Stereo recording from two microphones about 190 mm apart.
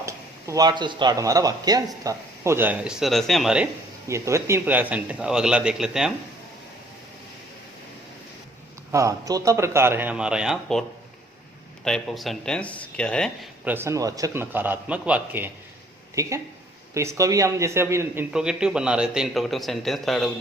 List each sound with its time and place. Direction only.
0.0 s a man's voice: 15° right (ahead or behind)
4.1 s a man's voice: 15° right (ahead or behind)
8.9 s a man's voice: 15° right (ahead or behind); by 10.8 s centre (ahead or behind)
11.9 s speech: centre (ahead or behind)
13.7 s a man's voice: 15° right (ahead or behind)